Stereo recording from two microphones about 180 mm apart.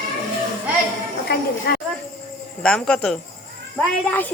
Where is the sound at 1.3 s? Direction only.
65° left (ahead or behind).